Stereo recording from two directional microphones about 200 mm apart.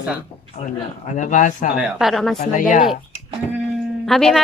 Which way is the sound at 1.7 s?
Centre (ahead or behind).